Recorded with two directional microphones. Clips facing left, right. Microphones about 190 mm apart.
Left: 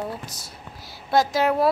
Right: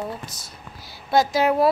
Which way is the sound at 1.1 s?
Centre (ahead or behind).